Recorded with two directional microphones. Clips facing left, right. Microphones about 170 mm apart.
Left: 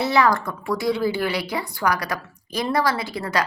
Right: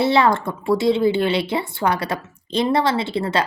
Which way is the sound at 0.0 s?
25° right (ahead or behind).